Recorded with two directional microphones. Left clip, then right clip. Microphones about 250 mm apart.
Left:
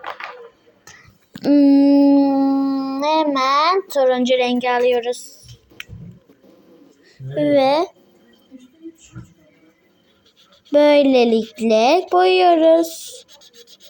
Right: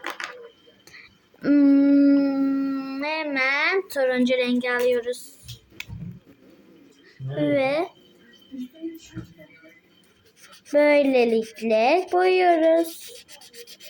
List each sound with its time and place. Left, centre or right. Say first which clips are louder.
0.9 s dog: left 2 dB; centre
7.3 s speech: left 7 dB; centre
10.7 s speech: left 5 dB; left